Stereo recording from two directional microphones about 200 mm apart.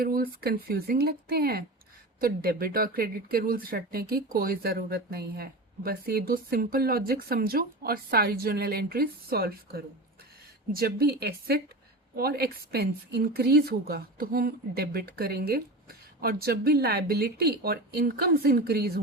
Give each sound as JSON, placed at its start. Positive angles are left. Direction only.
{"t": 0.0, "sound": "speech", "side_deg": -50}